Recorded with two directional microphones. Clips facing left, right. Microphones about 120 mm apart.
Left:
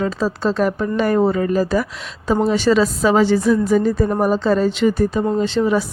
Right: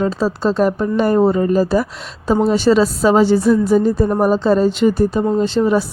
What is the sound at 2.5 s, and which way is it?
A woman's voice, 35° right (ahead or behind).